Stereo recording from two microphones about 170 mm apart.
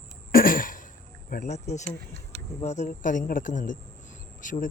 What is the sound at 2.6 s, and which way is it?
Speech, 40° left (ahead or behind).